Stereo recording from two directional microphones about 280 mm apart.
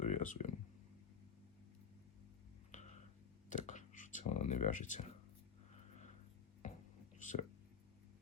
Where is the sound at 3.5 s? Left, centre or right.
Left.